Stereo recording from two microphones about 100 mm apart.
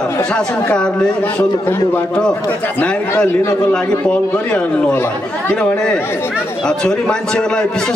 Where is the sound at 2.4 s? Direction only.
15° left (ahead or behind).